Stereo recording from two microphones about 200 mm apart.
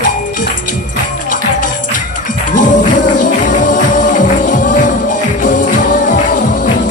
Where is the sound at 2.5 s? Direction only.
40° left (ahead or behind).